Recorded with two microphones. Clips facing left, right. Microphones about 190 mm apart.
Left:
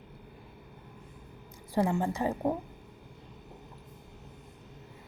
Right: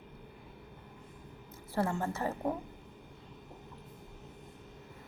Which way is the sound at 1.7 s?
15° left (ahead or behind).